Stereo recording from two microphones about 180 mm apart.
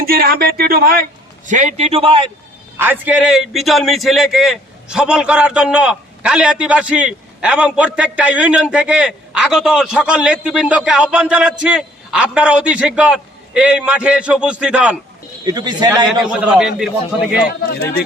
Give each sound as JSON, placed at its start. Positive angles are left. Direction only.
{"t": 0.0, "sound": "speech", "side_deg": -55}
{"t": 1.5, "sound": "a man's voice", "side_deg": -45}
{"t": 2.7, "sound": "a man's voice", "side_deg": -10}
{"t": 15.4, "sound": "a man's voice", "side_deg": -20}
{"t": 16.2, "sound": "a man's voice", "side_deg": -5}